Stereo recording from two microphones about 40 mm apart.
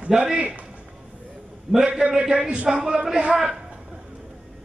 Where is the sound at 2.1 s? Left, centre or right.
Right.